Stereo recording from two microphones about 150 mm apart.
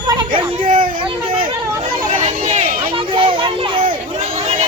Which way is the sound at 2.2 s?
55° right (ahead or behind).